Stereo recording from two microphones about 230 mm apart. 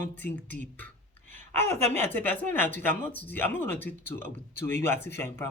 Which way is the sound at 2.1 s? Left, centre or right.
Centre.